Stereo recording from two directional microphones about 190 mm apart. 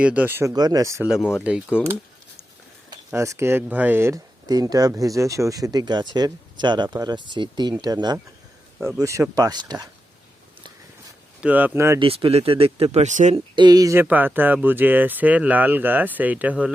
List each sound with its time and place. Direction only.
0.0 s speech: 10° right (ahead or behind)
1.0 s speech: centre (ahead or behind)
3.1 s speech: 15° right (ahead or behind)
11.3 s speech: 10° right (ahead or behind)
11.9 s speech: 30° right (ahead or behind)
13.6 s speech: 20° right (ahead or behind)